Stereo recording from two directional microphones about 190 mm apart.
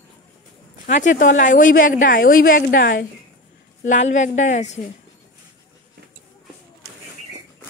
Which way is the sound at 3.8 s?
40° left (ahead or behind).